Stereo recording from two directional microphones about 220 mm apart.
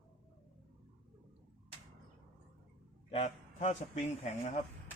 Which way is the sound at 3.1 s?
30° left (ahead or behind).